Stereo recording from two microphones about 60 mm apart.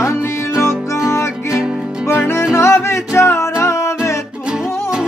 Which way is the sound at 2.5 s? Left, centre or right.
Left.